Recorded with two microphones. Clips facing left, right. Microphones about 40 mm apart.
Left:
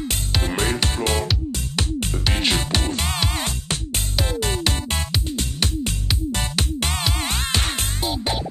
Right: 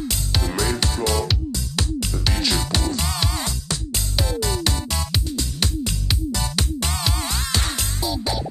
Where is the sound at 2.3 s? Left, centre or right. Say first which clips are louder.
Left 2 dB; left.